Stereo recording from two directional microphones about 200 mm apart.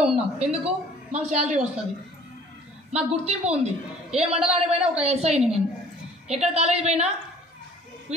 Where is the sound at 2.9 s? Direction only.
30° right (ahead or behind).